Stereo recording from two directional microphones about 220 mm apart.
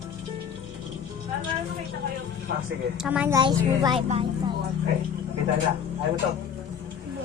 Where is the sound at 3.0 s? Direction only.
5° right (ahead or behind).